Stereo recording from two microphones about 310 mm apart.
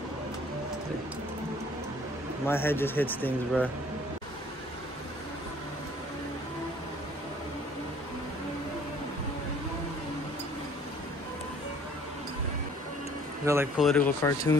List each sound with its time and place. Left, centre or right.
2.4 s speech: centre
13.5 s speech: centre